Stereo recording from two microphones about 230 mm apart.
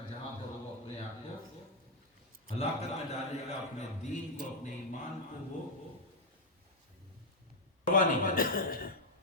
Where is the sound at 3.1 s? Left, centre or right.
Left.